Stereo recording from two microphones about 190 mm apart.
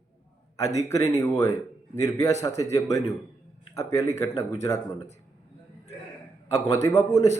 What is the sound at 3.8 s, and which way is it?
Speech, 15° left (ahead or behind).